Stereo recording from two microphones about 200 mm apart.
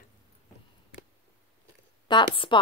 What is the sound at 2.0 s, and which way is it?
Speech, 25° left (ahead or behind).